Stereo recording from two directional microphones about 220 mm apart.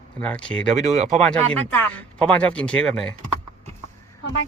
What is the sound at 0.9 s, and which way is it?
Speech, 35° right (ahead or behind).